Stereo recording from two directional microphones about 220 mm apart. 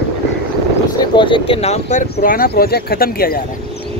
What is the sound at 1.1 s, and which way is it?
Speech, 20° left (ahead or behind).